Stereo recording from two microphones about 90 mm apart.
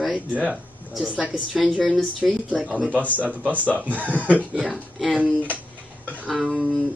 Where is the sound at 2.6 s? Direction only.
15° right (ahead or behind).